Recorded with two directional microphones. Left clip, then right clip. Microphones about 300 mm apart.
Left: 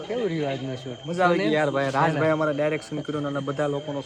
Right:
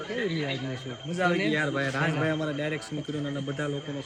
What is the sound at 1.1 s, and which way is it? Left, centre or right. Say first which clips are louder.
A man's voice: left 5 dB; centre.